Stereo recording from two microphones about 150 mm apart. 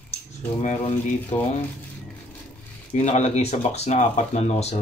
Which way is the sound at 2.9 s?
50° left (ahead or behind).